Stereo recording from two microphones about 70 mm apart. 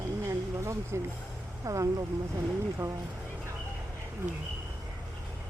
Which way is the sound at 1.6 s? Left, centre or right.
Right.